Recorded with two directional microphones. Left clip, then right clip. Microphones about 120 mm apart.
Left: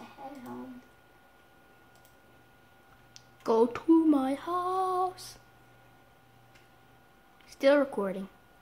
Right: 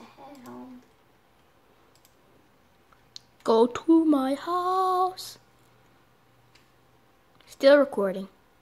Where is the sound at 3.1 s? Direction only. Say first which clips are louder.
Right 5 dB; 65° right (ahead or behind).